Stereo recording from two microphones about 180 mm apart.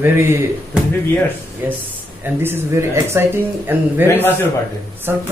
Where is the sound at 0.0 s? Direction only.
15° right (ahead or behind).